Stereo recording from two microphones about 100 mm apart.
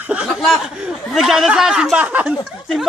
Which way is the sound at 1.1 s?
5° right (ahead or behind).